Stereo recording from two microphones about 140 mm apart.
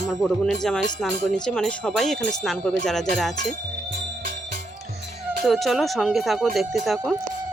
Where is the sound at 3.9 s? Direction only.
70° right (ahead or behind).